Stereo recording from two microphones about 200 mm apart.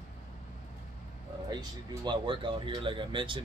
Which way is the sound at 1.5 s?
20° right (ahead or behind).